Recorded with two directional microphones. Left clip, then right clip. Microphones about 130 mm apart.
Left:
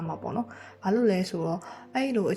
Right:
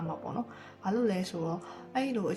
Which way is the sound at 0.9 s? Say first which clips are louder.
Left 6 dB; 30° left (ahead or behind).